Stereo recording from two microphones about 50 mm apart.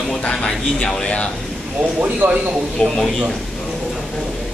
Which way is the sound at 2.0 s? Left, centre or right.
Right.